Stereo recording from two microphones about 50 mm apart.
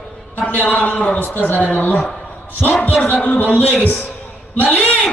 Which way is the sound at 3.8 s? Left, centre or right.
Left.